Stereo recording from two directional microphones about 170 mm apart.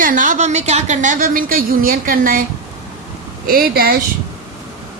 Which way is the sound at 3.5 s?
60° right (ahead or behind).